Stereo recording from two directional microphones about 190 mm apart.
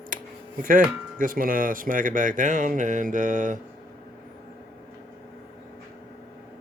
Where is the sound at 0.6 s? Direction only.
45° right (ahead or behind).